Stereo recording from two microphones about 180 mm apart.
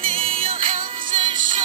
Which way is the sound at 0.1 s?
30° right (ahead or behind).